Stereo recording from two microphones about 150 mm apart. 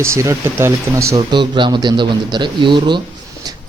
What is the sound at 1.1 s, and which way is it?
A man's voice, 30° right (ahead or behind).